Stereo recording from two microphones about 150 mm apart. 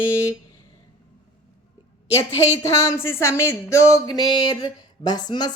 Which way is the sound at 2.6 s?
20° left (ahead or behind).